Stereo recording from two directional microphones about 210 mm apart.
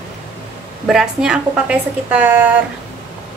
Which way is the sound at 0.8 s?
Centre (ahead or behind).